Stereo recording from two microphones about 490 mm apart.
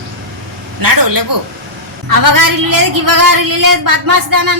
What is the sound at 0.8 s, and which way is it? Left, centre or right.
Speech, right.